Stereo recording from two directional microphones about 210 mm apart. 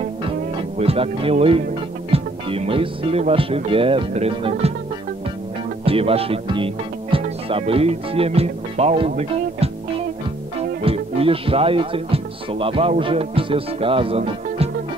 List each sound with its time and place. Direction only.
0.6 s speech: 25° right (ahead or behind)
5.9 s speech: 25° right (ahead or behind)
10.6 s music: 25° right (ahead or behind)
13.0 s speech: 25° right (ahead or behind)